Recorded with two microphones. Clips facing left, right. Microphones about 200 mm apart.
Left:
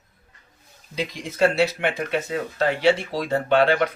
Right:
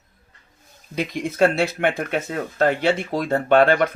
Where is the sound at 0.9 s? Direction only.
55° right (ahead or behind).